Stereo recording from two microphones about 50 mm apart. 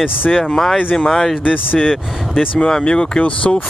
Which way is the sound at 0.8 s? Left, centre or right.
Left.